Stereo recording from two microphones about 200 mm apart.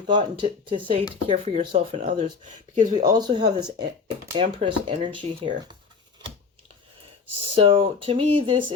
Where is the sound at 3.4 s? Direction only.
20° right (ahead or behind).